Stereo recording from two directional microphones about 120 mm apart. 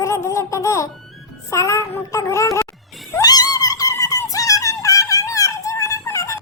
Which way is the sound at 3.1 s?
30° left (ahead or behind).